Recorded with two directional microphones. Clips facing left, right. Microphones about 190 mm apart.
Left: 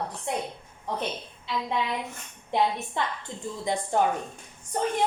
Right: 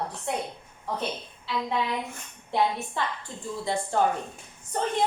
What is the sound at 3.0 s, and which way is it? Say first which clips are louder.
A woman's voice: left 1 dB; 20° left (ahead or behind).